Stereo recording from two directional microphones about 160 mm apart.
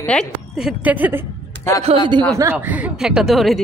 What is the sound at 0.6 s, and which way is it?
Speech, 5° right (ahead or behind).